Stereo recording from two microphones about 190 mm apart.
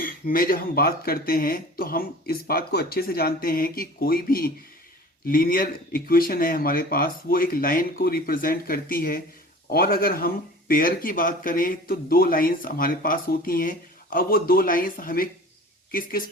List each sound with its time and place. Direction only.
0.0 s speech: 45° left (ahead or behind)